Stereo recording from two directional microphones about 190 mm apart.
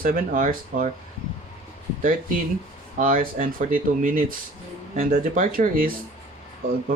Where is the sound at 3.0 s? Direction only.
45° right (ahead or behind).